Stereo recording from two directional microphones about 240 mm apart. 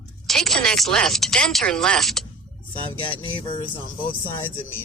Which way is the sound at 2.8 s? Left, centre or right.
Left.